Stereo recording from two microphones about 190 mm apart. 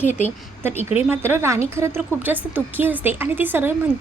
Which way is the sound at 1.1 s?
10° right (ahead or behind).